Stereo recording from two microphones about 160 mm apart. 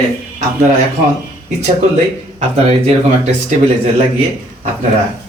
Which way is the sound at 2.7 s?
40° right (ahead or behind).